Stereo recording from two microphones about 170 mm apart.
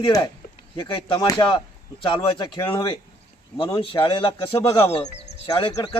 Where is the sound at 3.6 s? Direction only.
30° left (ahead or behind).